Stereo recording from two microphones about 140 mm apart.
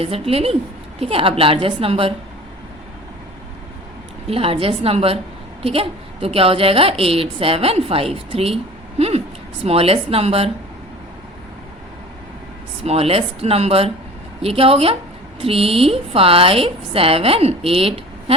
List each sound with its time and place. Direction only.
0.0 s a woman's voice: 45° right (ahead or behind)
4.3 s a woman's voice: 45° right (ahead or behind)
12.8 s a woman's voice: 45° right (ahead or behind)